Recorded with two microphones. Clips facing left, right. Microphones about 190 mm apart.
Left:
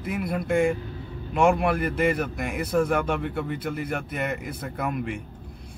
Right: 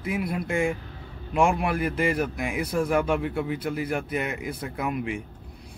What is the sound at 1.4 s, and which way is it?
A man's voice, centre (ahead or behind).